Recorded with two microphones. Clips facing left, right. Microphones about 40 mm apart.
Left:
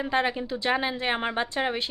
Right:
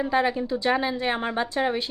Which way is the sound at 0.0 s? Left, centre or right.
Centre.